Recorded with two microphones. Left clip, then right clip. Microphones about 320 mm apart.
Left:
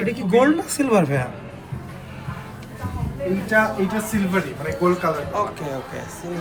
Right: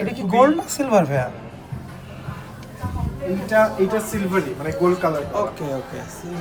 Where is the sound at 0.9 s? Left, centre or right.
Centre.